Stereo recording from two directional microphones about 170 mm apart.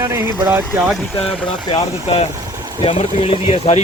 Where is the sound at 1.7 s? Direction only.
35° left (ahead or behind).